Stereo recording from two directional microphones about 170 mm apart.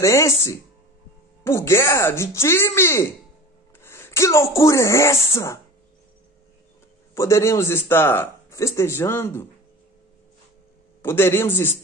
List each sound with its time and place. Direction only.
0.0 s a man's voice: 15° left (ahead or behind)
7.2 s a man's voice: 15° left (ahead or behind)
11.0 s a man's voice: 15° left (ahead or behind)